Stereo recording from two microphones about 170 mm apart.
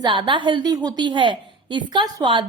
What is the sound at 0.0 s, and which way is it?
A woman's voice, 25° right (ahead or behind).